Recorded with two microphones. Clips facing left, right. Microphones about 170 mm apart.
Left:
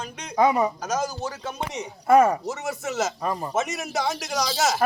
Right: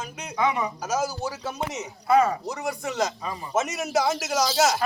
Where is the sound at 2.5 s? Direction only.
5° left (ahead or behind).